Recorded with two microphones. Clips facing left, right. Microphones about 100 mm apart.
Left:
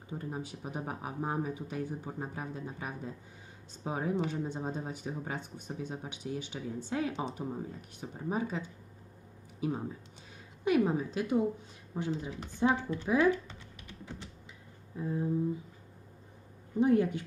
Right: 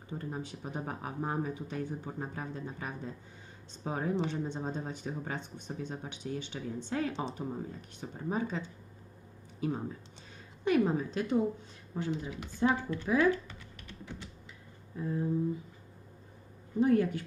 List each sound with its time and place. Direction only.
0.1 s speech: 10° left (ahead or behind)
14.9 s speech: 20° left (ahead or behind)
16.8 s speech: 20° left (ahead or behind)